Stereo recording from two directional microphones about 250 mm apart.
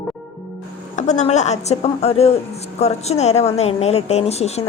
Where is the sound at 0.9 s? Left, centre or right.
Left.